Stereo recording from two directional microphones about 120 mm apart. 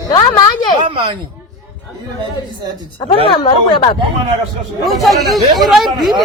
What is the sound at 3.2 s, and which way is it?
Speech, 40° left (ahead or behind).